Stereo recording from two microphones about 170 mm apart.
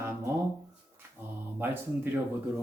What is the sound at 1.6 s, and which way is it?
Speech, 10° right (ahead or behind).